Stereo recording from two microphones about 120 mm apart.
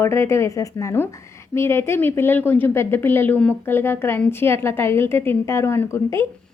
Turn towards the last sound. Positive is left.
turn(degrees=20)  # may be behind; listen again after turning